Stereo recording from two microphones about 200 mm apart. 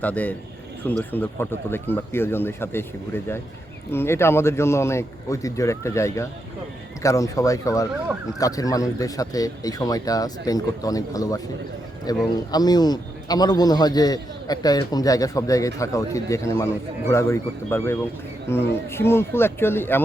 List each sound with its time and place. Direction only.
0.0 s a man's voice: 10° left (ahead or behind)